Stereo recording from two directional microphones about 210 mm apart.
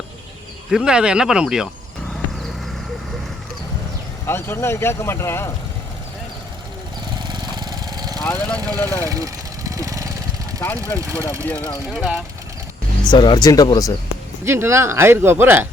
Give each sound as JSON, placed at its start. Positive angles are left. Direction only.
{"t": 0.7, "sound": "speech", "side_deg": -5}
{"t": 4.3, "sound": "speech", "side_deg": 10}
{"t": 7.2, "sound": "vehicle", "side_deg": -20}
{"t": 8.2, "sound": "speech", "side_deg": 5}
{"t": 9.0, "sound": "vehicle", "side_deg": -15}
{"t": 10.6, "sound": "speech", "side_deg": 10}
{"t": 11.0, "sound": "speech", "side_deg": -15}
{"t": 11.4, "sound": "speech", "side_deg": 10}
{"t": 13.1, "sound": "speech", "side_deg": 20}
{"t": 14.4, "sound": "speech", "side_deg": -10}